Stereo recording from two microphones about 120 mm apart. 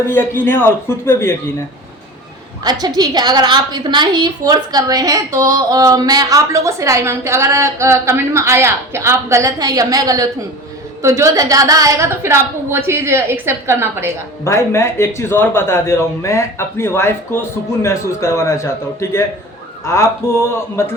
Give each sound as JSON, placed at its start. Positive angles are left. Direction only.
{"t": 0.1, "sound": "a man's voice", "side_deg": 20}
{"t": 2.6, "sound": "a woman's voice", "side_deg": -35}
{"t": 14.4, "sound": "a man's voice", "side_deg": 25}